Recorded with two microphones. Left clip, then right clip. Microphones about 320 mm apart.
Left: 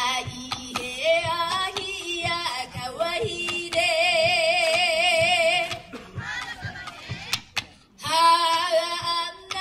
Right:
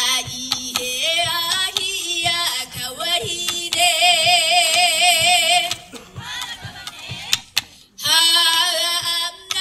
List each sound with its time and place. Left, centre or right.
0.0 s female singing: centre
2.2 s music: centre
7.5 s female singing: centre